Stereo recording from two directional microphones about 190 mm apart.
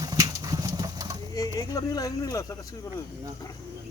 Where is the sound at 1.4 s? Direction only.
20° left (ahead or behind).